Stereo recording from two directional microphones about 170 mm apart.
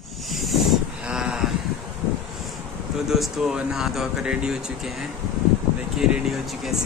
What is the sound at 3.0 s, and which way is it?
A man's voice, centre (ahead or behind).